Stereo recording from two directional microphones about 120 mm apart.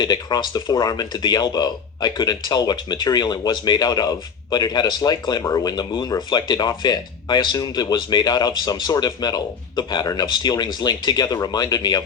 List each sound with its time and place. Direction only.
0.0 s speech: 35° left (ahead or behind)